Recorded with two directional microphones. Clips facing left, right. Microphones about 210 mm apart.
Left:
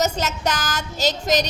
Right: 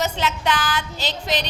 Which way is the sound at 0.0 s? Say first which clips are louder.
Left 1 dB; 40° left (ahead or behind).